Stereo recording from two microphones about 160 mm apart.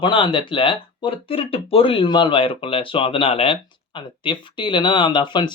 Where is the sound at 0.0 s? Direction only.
30° left (ahead or behind).